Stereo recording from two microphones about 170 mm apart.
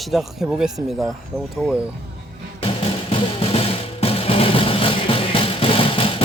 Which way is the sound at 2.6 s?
35° left (ahead or behind).